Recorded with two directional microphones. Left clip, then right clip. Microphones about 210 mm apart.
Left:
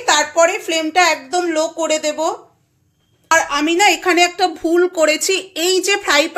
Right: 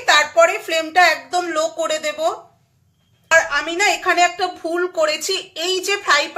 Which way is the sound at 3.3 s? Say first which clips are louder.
Left 1 dB; 35° left (ahead or behind).